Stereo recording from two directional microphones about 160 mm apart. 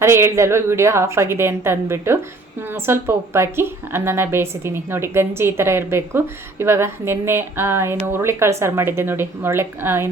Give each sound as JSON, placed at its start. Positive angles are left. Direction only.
{"t": 0.0, "sound": "a woman's voice", "side_deg": -15}